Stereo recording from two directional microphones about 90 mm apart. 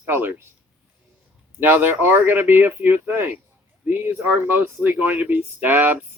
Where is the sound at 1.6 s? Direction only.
20° right (ahead or behind).